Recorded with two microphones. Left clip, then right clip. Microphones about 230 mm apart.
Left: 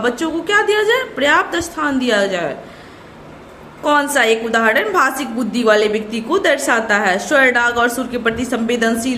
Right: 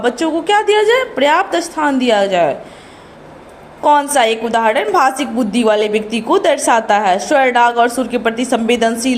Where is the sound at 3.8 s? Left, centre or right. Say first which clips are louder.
Right 3 dB; centre.